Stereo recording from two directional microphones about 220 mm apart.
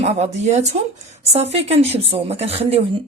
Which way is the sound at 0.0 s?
30° right (ahead or behind).